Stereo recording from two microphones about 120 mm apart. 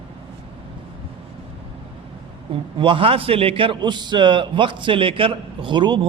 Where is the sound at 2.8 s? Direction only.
45° right (ahead or behind).